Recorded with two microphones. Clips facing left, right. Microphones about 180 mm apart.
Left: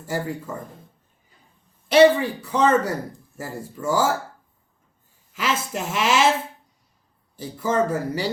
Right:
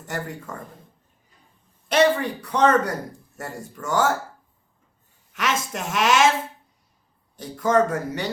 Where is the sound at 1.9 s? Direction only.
5° left (ahead or behind).